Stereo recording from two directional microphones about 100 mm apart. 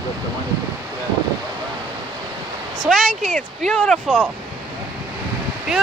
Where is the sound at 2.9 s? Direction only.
Centre (ahead or behind).